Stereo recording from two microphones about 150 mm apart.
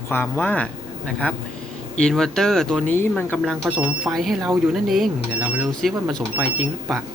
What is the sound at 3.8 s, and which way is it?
Speech, 10° right (ahead or behind).